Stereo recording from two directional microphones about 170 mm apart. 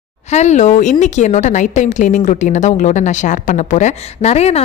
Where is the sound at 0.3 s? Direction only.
40° left (ahead or behind).